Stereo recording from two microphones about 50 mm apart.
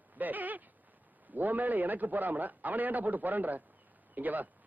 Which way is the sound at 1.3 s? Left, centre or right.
Right.